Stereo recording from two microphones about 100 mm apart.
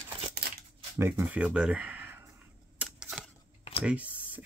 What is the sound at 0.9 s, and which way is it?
Speech, 25° right (ahead or behind).